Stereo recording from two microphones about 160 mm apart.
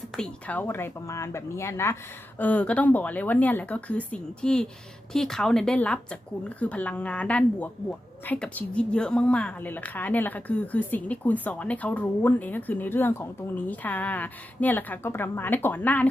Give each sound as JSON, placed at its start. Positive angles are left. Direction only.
{"t": 0.2, "sound": "a woman's voice", "side_deg": 10}